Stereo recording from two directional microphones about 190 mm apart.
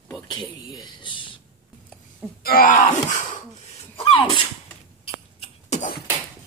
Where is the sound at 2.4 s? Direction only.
50° left (ahead or behind).